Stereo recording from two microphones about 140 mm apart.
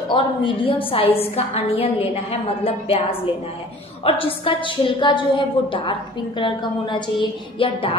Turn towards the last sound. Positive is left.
turn(degrees=40)  # may be behind; listen again after turning